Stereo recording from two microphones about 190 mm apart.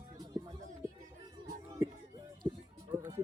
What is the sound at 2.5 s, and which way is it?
Music, 25° right (ahead or behind).